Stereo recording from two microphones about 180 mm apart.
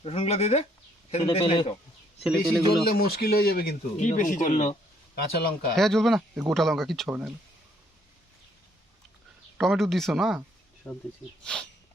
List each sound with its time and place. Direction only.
0.0 s a man's voice: 35° left (ahead or behind)
2.2 s speech: centre (ahead or behind)
2.8 s speech: 55° left (ahead or behind)
4.5 s a man's voice: 30° left (ahead or behind)
5.1 s speech: 55° left (ahead or behind)
5.7 s speech: centre (ahead or behind)
9.6 s speech: centre (ahead or behind)
10.8 s speech: 10° left (ahead or behind)